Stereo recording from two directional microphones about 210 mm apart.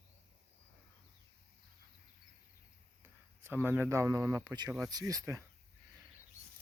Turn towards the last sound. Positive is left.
turn(degrees=-15)  # may be behind; listen again after turning